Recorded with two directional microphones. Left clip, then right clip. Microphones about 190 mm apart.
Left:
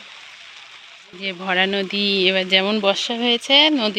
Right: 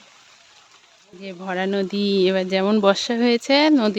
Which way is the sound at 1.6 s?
25° right (ahead or behind).